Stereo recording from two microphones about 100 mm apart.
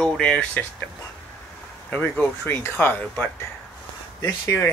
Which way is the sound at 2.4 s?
25° left (ahead or behind).